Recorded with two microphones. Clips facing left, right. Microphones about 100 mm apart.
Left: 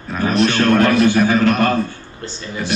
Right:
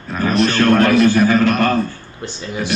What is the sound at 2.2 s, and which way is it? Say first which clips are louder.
Speech: right 2 dB; 15° right (ahead or behind).